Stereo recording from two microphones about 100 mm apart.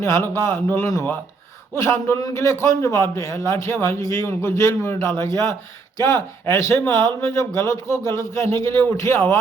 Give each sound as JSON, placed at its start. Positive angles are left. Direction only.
{"t": 0.0, "sound": "a man's voice", "side_deg": 30}